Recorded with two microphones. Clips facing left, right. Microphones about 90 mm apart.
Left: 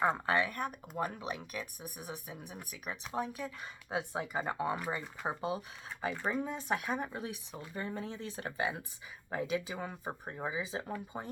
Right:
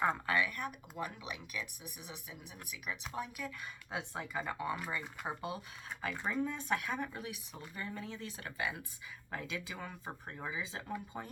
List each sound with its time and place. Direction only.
0.0 s speech: 25° left (ahead or behind)